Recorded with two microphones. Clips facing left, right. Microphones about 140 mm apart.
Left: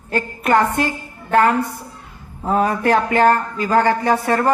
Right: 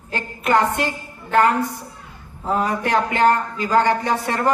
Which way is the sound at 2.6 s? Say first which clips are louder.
Left 4 dB; 55° left (ahead or behind).